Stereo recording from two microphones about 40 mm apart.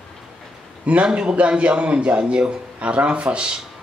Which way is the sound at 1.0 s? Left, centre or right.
Right.